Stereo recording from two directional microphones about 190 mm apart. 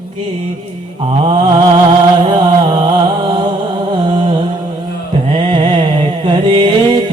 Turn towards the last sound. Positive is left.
turn(degrees=-25)  # may be behind; listen again after turning